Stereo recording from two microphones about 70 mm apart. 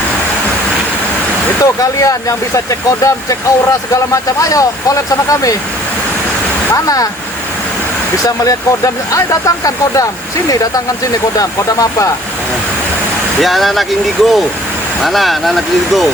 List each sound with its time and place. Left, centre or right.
1.6 s speech: left
6.8 s speech: left
8.2 s speech: left
11.3 s speech: left
13.4 s speech: centre